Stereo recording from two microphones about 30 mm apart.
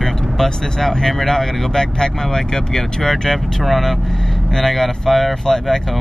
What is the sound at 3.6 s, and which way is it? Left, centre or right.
Speech, centre.